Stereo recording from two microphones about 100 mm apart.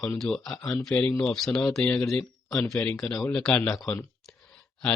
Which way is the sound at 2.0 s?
5° left (ahead or behind).